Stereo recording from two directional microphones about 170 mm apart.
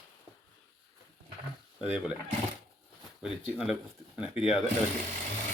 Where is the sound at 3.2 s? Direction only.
5° right (ahead or behind).